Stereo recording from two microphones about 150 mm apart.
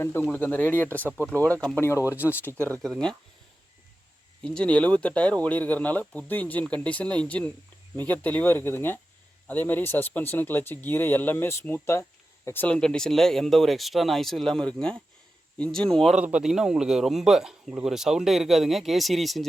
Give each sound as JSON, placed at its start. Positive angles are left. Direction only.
{"t": 0.0, "sound": "speech", "side_deg": 15}
{"t": 4.4, "sound": "a man's voice", "side_deg": 5}